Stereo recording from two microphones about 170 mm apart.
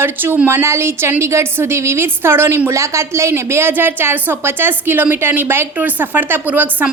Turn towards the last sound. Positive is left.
turn(degrees=-10)  # may be behind; listen again after turning